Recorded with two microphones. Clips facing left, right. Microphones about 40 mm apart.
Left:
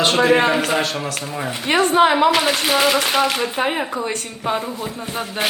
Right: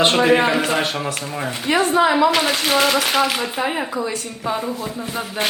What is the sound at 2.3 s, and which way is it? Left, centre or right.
Speech, centre.